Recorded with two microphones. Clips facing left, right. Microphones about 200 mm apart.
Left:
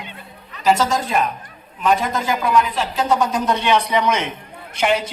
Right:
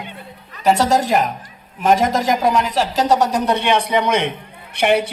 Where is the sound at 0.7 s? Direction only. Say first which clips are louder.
Right 3 dB; 65° right (ahead or behind).